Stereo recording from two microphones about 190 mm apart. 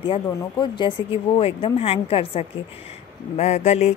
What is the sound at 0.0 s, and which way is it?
A woman's voice, 25° left (ahead or behind).